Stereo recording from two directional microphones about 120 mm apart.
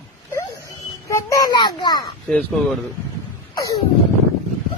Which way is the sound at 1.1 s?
25° left (ahead or behind).